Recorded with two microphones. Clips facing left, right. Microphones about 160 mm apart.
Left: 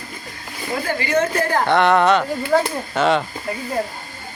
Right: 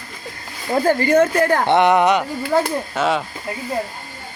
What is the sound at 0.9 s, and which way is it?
Speech, 50° right (ahead or behind).